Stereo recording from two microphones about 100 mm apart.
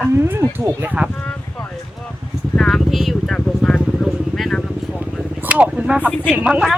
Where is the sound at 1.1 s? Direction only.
15° left (ahead or behind).